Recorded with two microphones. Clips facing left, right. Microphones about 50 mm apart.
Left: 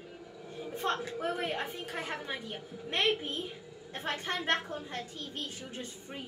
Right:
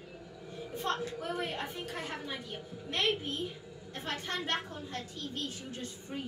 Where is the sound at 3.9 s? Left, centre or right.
Left.